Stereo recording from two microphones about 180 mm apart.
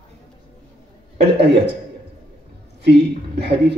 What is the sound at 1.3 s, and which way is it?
Speech, 70° right (ahead or behind).